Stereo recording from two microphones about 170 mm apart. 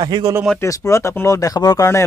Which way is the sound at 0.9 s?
15° left (ahead or behind).